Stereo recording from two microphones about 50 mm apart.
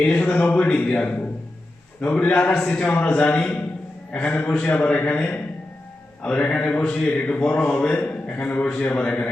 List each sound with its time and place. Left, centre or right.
0.0 s a man's voice: left
2.0 s a man's voice: left
6.2 s a man's voice: left